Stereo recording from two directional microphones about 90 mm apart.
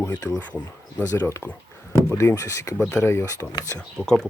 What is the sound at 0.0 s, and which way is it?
Speech, 35° left (ahead or behind).